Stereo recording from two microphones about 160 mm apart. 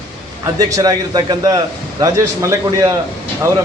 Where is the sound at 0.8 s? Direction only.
25° right (ahead or behind).